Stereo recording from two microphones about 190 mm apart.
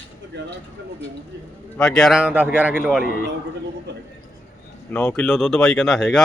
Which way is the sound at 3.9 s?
65° right (ahead or behind).